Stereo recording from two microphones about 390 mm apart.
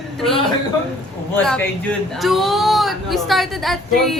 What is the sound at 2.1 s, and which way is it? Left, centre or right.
A woman's voice, centre.